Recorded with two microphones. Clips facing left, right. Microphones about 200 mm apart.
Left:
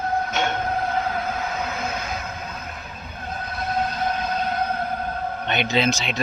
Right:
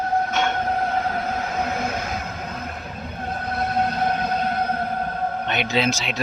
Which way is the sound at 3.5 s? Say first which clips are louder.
Right 3 dB; 60° right (ahead or behind).